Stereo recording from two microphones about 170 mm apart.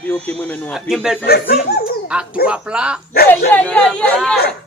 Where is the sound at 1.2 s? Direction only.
65° left (ahead or behind).